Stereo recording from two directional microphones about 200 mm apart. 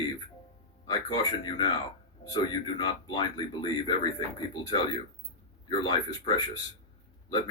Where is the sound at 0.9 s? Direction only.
20° left (ahead or behind).